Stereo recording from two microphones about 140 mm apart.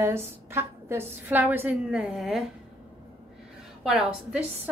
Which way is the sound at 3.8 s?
5° right (ahead or behind).